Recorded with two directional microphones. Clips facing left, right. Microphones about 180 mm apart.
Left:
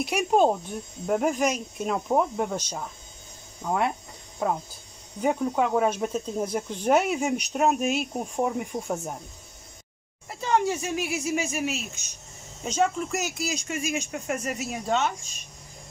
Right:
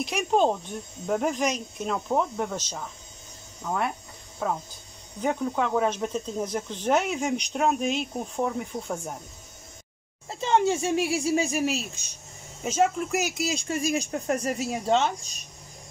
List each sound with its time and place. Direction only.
0.0 s speech: 10° left (ahead or behind)
5.2 s speech: 10° left (ahead or behind)
8.4 s speech: 20° left (ahead or behind)
10.2 s speech: 25° right (ahead or behind)
12.6 s speech: 5° right (ahead or behind)
13.4 s speech: 30° right (ahead or behind)